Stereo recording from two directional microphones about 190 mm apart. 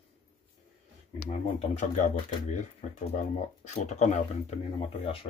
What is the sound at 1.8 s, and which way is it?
Speech, 40° left (ahead or behind).